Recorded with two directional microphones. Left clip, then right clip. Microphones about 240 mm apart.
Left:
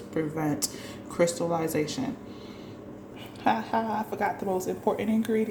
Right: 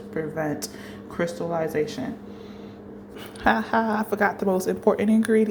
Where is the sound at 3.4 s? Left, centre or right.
Centre.